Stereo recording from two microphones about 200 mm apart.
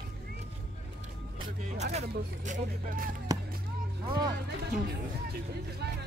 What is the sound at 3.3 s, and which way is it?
Music, 20° right (ahead or behind).